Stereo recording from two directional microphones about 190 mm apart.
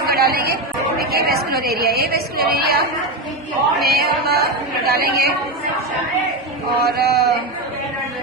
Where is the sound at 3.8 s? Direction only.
55° right (ahead or behind).